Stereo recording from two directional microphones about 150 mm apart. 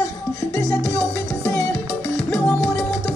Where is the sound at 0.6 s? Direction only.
20° left (ahead or behind).